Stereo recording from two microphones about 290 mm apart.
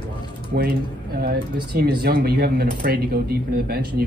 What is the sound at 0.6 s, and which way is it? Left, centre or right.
Speech, right.